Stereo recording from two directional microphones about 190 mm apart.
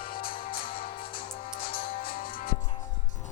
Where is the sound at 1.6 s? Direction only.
30° left (ahead or behind).